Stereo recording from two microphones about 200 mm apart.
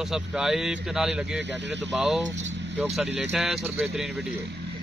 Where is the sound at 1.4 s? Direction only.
60° right (ahead or behind).